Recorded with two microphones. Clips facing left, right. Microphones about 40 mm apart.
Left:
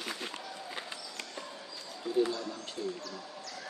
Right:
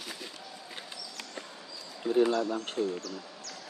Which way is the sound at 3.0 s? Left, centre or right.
Left.